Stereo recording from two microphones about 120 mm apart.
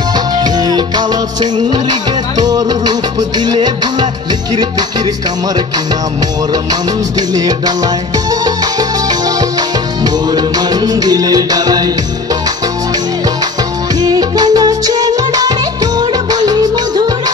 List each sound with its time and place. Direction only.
0.1 s music: 35° right (ahead or behind)
6.5 s music: 35° right (ahead or behind)
13.9 s music of bollywood: 30° right (ahead or behind)